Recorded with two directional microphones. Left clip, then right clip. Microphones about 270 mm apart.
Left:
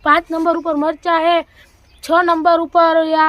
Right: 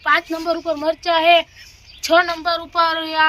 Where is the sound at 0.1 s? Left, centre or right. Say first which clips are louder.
Left 4 dB; left.